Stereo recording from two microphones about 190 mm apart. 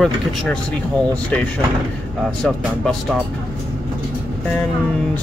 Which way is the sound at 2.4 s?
5° left (ahead or behind).